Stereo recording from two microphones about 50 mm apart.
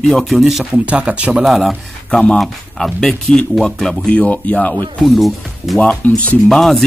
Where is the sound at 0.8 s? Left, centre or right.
Right.